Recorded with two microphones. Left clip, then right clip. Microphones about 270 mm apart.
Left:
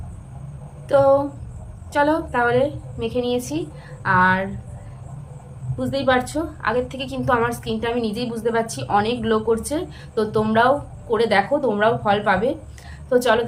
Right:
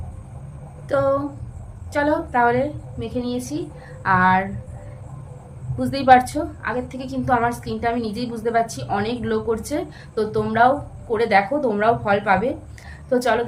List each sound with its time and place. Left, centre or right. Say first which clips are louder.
0.9 s a woman's voice: left 4 dB; centre
5.8 s a woman's voice: right 5 dB; centre